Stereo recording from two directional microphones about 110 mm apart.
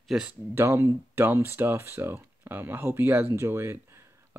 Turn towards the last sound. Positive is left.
turn(degrees=-20)  # may be behind; listen again after turning